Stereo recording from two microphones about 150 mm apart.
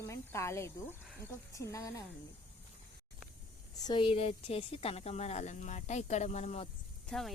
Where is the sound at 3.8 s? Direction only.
30° left (ahead or behind).